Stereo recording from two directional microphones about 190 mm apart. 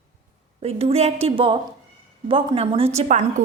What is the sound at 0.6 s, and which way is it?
A woman's voice, 30° right (ahead or behind).